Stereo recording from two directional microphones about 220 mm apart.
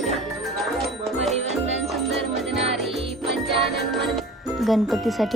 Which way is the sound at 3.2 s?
Centre (ahead or behind).